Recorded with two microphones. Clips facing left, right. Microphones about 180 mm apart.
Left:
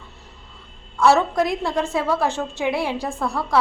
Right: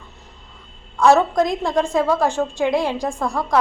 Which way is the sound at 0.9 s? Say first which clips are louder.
Right 2 dB; 15° right (ahead or behind).